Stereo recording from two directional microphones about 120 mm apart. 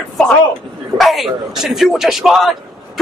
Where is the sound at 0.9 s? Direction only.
Centre (ahead or behind).